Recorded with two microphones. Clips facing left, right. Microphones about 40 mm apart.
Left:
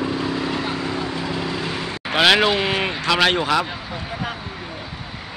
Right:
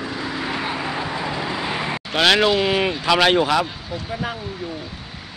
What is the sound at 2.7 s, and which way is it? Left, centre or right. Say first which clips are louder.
Speech: right 1 dB; centre.